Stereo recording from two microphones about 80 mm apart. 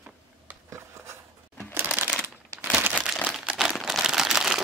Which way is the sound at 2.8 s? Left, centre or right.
Right.